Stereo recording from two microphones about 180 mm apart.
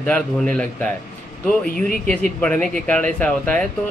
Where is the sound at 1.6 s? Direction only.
55° left (ahead or behind).